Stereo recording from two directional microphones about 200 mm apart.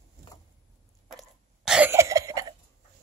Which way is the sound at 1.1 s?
5° right (ahead or behind).